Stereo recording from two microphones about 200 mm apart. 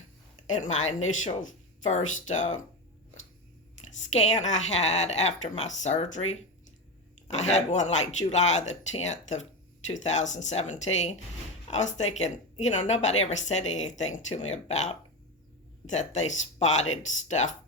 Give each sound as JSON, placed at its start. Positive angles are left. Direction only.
{"t": 0.4, "sound": "a woman's voice", "side_deg": 35}
{"t": 4.4, "sound": "a woman's voice", "side_deg": 35}
{"t": 7.3, "sound": "a woman's voice", "side_deg": 35}